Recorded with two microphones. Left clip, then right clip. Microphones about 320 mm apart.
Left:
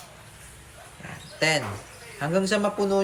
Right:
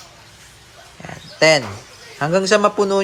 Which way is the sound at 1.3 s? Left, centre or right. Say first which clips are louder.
Right 10 dB; centre.